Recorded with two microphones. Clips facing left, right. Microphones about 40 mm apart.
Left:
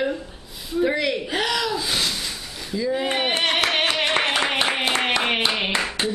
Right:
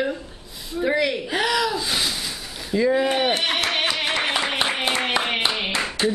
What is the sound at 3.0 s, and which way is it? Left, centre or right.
Speech, centre.